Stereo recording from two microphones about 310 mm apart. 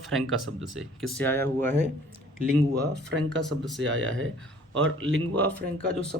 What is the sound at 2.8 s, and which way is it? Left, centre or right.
Speech, right.